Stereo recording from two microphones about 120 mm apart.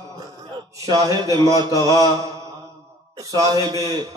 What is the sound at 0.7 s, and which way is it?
A man's voice, 30° right (ahead or behind).